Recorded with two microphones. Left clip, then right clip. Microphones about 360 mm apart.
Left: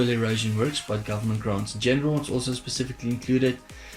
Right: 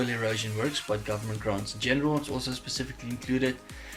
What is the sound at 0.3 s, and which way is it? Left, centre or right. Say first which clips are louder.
Speech: left 3 dB; centre.